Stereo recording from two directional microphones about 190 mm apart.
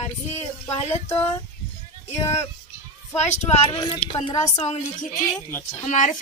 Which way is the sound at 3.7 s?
20° left (ahead or behind).